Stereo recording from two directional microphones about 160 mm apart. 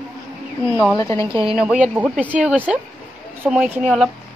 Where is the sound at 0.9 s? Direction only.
20° left (ahead or behind).